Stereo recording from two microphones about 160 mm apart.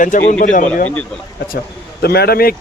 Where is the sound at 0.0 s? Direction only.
55° left (ahead or behind).